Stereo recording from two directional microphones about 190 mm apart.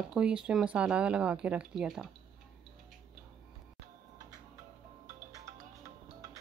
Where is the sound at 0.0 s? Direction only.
5° right (ahead or behind).